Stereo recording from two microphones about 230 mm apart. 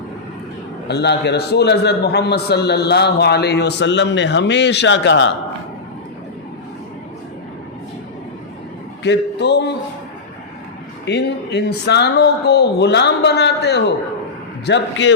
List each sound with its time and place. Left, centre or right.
0.9 s a man's voice: left
9.0 s a man's voice: left
11.0 s a man's voice: left